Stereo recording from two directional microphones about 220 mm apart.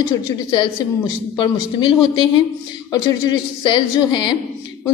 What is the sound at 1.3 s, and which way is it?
Speech, 20° left (ahead or behind).